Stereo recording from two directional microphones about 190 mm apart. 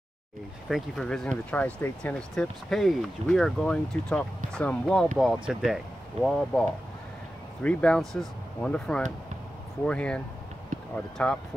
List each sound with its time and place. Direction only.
0.7 s speech: centre (ahead or behind)
10.7 s run: 45° right (ahead or behind)
11.2 s speech: 5° left (ahead or behind)